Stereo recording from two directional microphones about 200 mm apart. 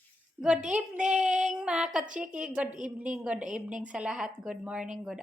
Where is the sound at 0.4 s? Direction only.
5° right (ahead or behind).